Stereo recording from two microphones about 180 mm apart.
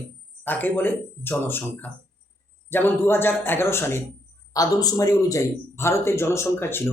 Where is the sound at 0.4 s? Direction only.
10° left (ahead or behind).